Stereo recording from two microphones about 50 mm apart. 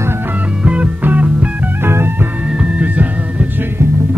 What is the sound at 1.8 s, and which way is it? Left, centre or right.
Music, right.